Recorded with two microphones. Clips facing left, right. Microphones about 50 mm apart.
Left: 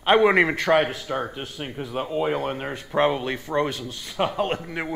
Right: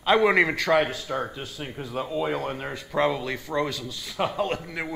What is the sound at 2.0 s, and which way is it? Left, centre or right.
Speech, left.